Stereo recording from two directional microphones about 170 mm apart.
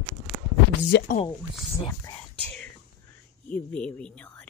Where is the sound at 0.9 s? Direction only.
80° left.